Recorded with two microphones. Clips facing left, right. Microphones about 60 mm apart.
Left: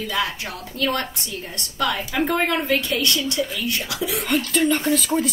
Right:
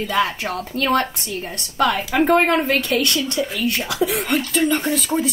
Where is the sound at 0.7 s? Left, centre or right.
Right.